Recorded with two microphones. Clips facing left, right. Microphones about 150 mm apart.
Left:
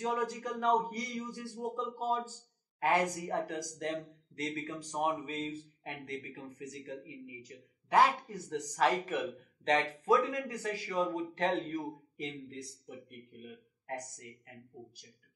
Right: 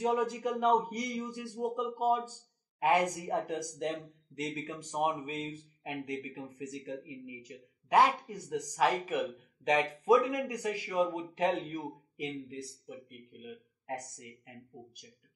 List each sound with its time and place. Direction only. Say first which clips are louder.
0.0 s a man's voice: right 4 dB; 20° right (ahead or behind)
7.4 s speech: right 3 dB; 10° right (ahead or behind)